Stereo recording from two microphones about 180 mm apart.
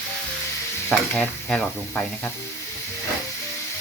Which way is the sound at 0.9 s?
5° left (ahead or behind).